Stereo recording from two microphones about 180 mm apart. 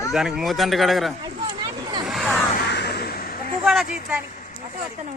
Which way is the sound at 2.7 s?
65° left (ahead or behind).